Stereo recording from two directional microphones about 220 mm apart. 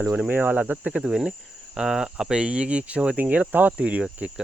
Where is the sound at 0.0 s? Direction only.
5° right (ahead or behind).